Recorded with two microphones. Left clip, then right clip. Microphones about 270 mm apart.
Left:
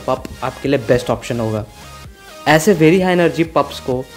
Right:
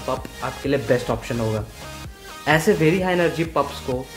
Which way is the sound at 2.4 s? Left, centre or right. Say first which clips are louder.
Left 6 dB; left.